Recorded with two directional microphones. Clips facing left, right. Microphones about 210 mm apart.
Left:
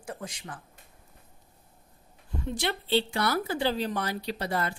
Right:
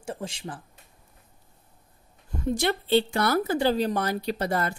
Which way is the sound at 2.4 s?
45° right (ahead or behind).